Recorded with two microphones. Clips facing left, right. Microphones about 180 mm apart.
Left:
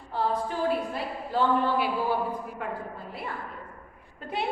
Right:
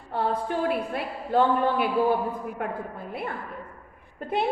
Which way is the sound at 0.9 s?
55° right (ahead or behind).